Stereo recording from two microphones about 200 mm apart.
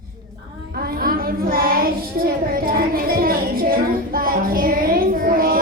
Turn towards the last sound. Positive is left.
turn(degrees=-45)  # may be behind; listen again after turning